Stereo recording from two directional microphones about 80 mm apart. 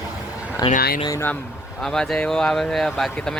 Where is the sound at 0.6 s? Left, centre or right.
Left.